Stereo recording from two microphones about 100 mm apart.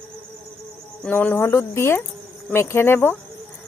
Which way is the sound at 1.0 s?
15° left (ahead or behind).